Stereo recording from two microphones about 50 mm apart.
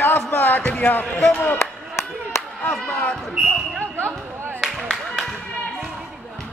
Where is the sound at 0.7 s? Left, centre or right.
Left.